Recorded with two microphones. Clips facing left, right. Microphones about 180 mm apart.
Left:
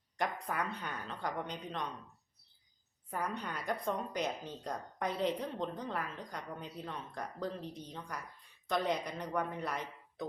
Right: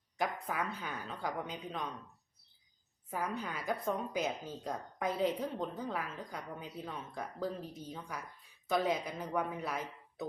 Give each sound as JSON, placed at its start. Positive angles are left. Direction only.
{"t": 0.2, "sound": "a woman's voice", "side_deg": -5}
{"t": 3.1, "sound": "a woman's voice", "side_deg": -5}